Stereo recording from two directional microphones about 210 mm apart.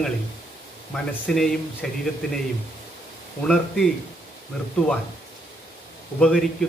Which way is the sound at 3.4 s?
Centre (ahead or behind).